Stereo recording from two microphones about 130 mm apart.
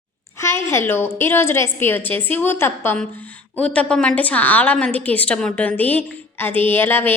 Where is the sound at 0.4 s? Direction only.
20° left (ahead or behind).